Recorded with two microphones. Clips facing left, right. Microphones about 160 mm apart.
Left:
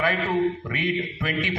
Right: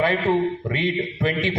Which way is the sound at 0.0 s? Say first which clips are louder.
Right 3 dB; 25° right (ahead or behind).